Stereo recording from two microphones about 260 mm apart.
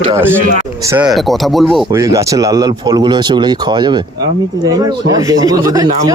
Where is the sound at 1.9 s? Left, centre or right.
Centre.